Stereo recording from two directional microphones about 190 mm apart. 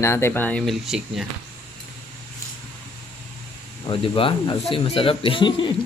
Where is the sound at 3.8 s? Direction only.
30° left (ahead or behind).